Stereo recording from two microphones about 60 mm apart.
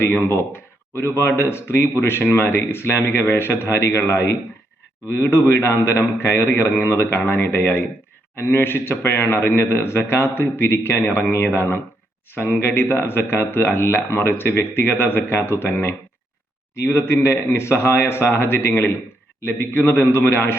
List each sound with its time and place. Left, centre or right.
0.0 s a man's voice: left